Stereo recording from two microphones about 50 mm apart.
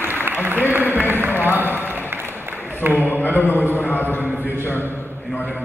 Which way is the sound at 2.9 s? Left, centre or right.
Left.